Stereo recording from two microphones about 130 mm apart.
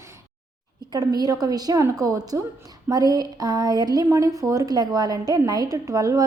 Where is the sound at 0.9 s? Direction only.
30° right (ahead or behind).